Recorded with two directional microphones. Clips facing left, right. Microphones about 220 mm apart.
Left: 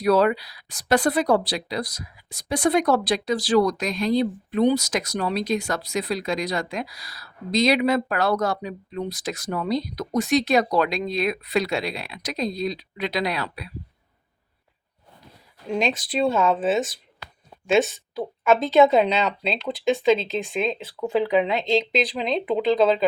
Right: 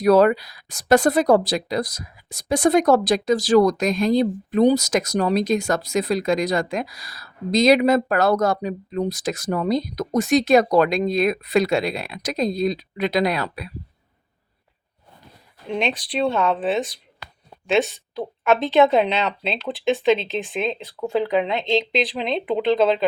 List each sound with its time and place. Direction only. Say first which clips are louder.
0.0 s speech: right 4 dB; 45° right (ahead or behind)
15.6 s speech: even; centre (ahead or behind)